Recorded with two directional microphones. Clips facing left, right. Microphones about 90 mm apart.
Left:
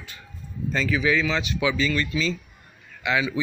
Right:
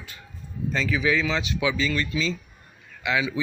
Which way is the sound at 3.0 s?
5° right (ahead or behind).